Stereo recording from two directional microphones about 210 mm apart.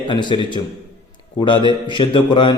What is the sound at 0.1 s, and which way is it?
Speech, 20° left (ahead or behind).